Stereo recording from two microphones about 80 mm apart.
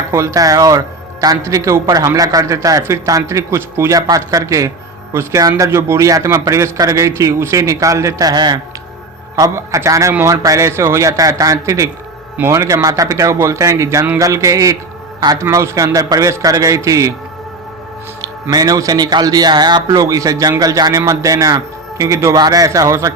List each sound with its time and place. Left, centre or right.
0.1 s a man's voice: right
8.3 s speech: right
9.3 s a man's voice: right
18.5 s speech: right
19.9 s a man's voice: right
22.4 s a man's voice: right